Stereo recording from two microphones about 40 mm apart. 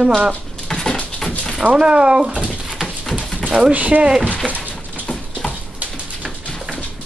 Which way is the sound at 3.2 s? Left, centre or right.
Left.